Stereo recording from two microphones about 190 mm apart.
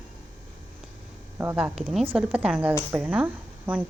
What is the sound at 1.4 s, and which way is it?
Speech, 10° right (ahead or behind).